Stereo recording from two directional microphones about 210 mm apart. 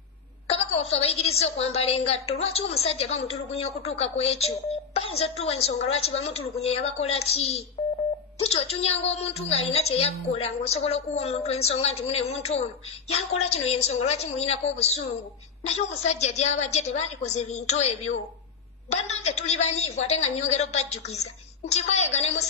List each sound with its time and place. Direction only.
0.5 s a woman's voice: 30° left (ahead or behind)